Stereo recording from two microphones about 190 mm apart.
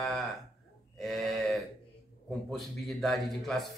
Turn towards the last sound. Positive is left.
turn(degrees=0)  # may be behind; listen again after turning